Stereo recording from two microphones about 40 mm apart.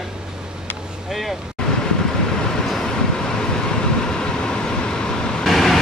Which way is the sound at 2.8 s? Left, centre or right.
Centre.